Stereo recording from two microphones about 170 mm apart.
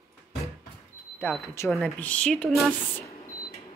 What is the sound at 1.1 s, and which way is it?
Speech, 10° left (ahead or behind).